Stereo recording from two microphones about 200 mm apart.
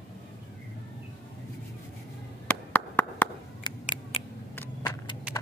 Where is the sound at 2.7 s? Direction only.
10° left (ahead or behind).